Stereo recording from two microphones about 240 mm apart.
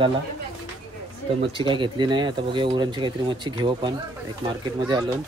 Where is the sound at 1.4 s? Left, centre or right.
Right.